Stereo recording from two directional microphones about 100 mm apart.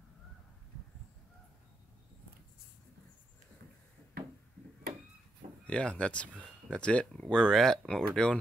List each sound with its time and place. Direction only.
5.7 s speech: 10° left (ahead or behind)